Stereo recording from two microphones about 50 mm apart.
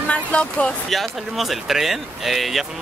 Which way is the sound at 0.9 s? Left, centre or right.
Centre.